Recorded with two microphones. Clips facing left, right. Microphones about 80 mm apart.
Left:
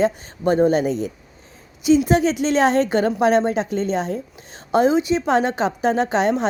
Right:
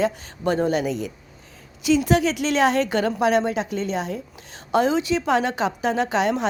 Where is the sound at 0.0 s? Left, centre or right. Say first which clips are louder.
Left 3 dB; left.